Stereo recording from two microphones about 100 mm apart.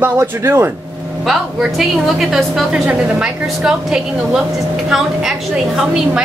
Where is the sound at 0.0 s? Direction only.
25° right (ahead or behind).